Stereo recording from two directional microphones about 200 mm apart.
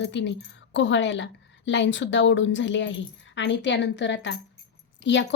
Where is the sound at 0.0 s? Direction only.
65° left (ahead or behind).